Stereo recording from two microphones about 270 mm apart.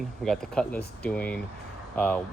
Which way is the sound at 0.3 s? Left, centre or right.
Centre.